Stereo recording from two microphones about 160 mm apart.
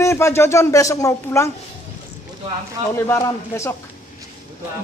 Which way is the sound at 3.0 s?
20° left (ahead or behind).